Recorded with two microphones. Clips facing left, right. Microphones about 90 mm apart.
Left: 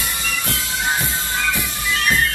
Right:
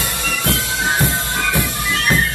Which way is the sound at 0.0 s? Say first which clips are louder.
Right 4 dB; 70° right (ahead or behind).